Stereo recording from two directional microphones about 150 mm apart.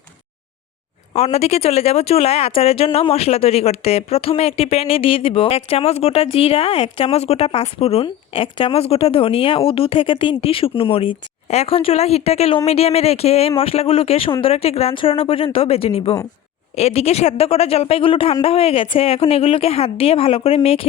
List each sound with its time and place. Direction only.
1.1 s speech: 45° left (ahead or behind)